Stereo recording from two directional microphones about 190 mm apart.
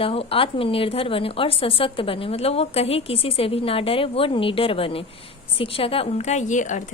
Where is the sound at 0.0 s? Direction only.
30° left (ahead or behind).